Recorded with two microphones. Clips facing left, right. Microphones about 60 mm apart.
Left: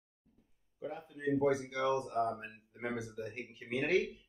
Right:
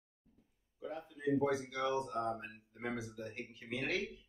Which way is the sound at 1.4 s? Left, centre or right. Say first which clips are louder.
Left 3 dB; left.